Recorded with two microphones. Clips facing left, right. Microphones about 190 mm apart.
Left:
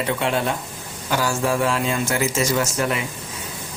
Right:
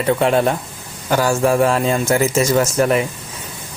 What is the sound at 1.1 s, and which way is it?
Speech, 45° right (ahead or behind).